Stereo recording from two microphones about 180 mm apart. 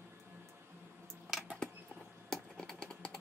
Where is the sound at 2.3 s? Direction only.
5° left (ahead or behind).